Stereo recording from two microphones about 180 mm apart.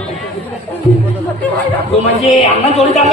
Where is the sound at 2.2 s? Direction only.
35° left (ahead or behind).